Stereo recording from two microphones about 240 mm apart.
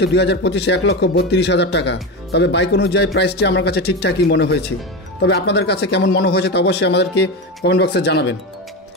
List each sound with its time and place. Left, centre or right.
0.0 s a man's voice: left